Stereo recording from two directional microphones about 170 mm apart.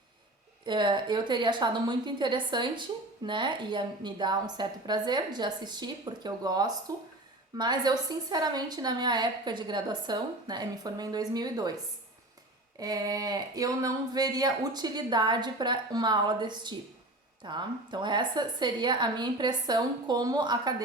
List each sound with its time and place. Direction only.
0.6 s a woman's voice: 25° right (ahead or behind)
12.8 s a woman's voice: 20° right (ahead or behind)